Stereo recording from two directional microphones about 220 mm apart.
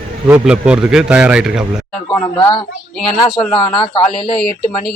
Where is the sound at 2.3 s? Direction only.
20° left (ahead or behind).